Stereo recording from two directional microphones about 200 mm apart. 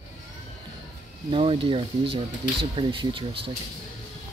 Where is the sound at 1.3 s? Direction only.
25° right (ahead or behind).